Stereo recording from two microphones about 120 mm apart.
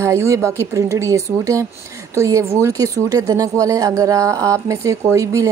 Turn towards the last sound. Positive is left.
turn(degrees=-25)  # may be behind; listen again after turning